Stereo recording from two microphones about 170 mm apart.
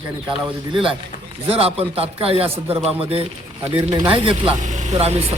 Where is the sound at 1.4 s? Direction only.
35° right (ahead or behind).